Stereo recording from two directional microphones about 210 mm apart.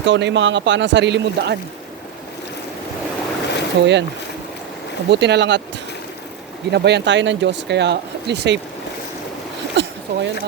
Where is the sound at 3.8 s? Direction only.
55° right (ahead or behind).